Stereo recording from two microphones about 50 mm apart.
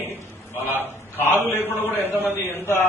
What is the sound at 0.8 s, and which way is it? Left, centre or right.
A man's voice, left.